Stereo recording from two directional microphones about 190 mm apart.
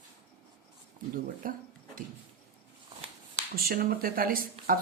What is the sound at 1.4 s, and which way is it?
Speech, 45° right (ahead or behind).